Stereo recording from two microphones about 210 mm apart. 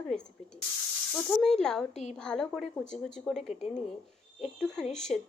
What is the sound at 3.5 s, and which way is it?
Speech, 35° left (ahead or behind).